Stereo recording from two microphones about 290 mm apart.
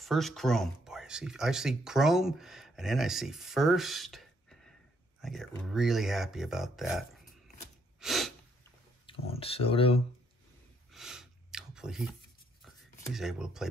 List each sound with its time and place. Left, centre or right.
0.0 s speech: centre
8.0 s sneeze: centre
9.3 s speech: centre
10.9 s a sound: centre
13.1 s speech: centre